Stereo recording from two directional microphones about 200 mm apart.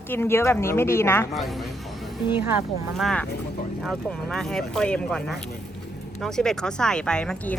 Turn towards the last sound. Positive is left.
turn(degrees=5)  # may be behind; listen again after turning